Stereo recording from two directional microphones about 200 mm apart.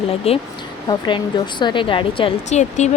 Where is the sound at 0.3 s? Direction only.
30° left (ahead or behind).